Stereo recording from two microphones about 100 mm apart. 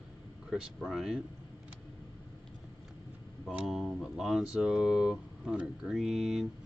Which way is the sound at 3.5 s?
Centre (ahead or behind).